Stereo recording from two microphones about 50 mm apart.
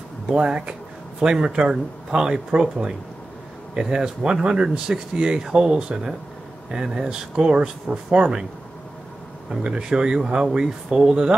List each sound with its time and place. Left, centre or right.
0.3 s speech: centre
9.5 s speech: centre